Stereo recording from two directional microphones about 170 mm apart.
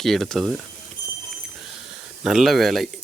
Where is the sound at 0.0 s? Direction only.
Centre (ahead or behind).